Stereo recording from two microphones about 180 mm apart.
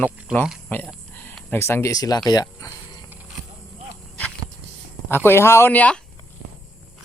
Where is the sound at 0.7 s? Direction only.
10° left (ahead or behind).